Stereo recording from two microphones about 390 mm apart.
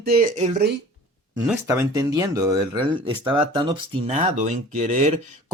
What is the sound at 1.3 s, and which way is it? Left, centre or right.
Speech, centre.